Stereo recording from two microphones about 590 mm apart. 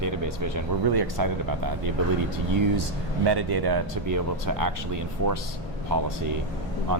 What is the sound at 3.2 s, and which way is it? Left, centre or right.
Speech, right.